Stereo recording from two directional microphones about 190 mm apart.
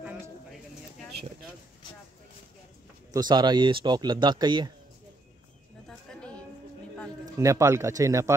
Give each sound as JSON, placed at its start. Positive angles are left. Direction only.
{"t": 0.0, "sound": "bird", "side_deg": -5}
{"t": 3.1, "sound": "speech", "side_deg": -20}
{"t": 5.9, "sound": "a sound", "side_deg": 5}
{"t": 7.3, "sound": "speech", "side_deg": -15}